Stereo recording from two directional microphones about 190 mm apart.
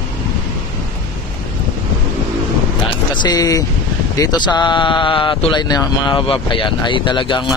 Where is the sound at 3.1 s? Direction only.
20° left (ahead or behind).